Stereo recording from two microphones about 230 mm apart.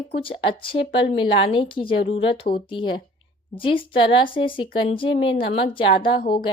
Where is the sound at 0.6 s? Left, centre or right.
Left.